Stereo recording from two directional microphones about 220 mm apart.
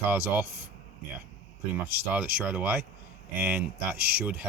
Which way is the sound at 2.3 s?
5° right (ahead or behind).